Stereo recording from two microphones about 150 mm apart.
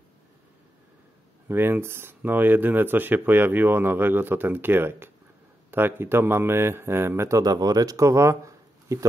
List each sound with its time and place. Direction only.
1.5 s speech: 15° right (ahead or behind)